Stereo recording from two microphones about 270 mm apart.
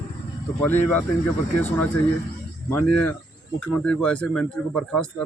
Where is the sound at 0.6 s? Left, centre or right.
Centre.